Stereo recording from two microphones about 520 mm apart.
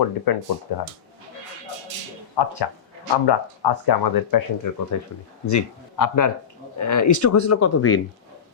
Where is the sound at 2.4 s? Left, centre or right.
Left.